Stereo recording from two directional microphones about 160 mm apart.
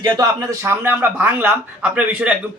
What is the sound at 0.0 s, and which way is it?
A man's voice, 20° right (ahead or behind).